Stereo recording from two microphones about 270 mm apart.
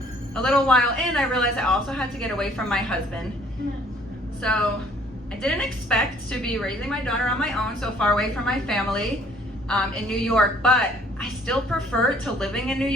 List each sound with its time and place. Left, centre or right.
0.3 s a woman's voice: centre
4.4 s a woman's voice: centre